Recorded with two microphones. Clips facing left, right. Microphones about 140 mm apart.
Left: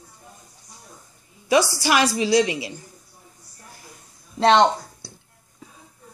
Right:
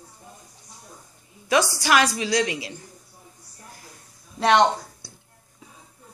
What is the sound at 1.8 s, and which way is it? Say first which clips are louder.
Speech: left 1 dB; 5° left (ahead or behind).